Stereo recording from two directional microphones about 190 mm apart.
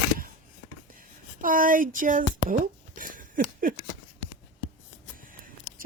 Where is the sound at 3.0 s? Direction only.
45° right (ahead or behind).